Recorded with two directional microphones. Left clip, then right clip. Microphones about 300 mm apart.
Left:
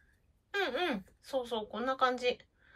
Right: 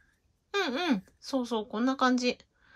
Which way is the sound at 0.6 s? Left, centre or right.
Centre.